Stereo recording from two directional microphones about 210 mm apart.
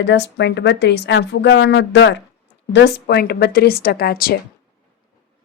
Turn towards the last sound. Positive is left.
turn(degrees=45)  # may be behind; listen again after turning